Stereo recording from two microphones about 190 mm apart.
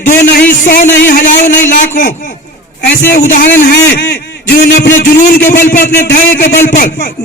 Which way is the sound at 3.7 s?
55° left (ahead or behind).